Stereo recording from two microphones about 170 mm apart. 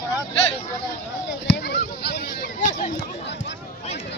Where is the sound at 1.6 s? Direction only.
80° left; by 2.7 s 60° left (ahead or behind).